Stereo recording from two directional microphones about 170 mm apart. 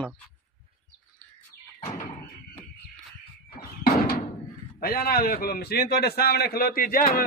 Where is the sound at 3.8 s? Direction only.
65° left (ahead or behind).